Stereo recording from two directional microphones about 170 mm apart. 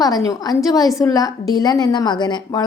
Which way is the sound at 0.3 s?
20° left (ahead or behind).